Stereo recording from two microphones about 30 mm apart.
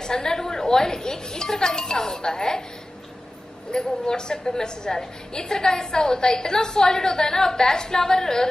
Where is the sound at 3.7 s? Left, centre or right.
Left.